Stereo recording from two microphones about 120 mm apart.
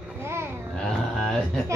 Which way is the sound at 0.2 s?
20° right (ahead or behind).